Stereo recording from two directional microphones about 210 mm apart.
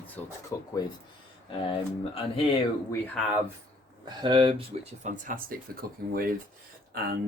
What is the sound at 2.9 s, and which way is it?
Speech, 10° left (ahead or behind).